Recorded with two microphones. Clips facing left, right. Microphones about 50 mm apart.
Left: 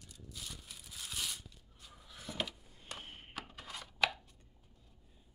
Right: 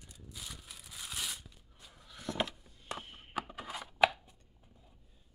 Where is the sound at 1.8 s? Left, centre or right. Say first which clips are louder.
Right 6 dB; centre.